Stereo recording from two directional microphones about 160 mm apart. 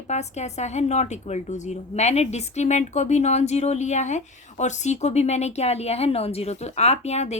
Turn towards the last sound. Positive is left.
turn(degrees=40)  # may be behind; listen again after turning